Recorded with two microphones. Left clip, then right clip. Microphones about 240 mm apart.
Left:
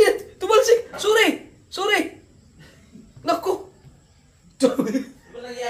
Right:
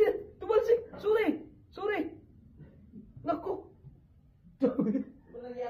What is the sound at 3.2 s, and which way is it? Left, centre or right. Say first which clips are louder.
Dog: left 11 dB; centre.